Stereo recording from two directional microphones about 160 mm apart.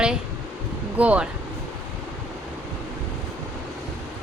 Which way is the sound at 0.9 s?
10° right (ahead or behind).